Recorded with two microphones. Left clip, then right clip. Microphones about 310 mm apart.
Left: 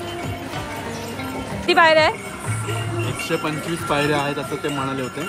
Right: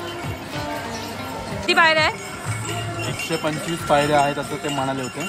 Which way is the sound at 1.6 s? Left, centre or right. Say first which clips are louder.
Left 2 dB; centre.